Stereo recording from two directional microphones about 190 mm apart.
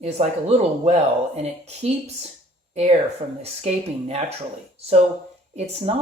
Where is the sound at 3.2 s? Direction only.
35° right (ahead or behind).